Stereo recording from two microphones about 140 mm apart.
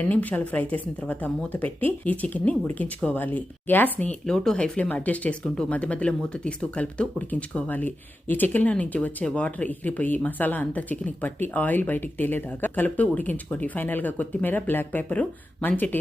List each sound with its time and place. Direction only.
0.0 s speech: 10° left (ahead or behind)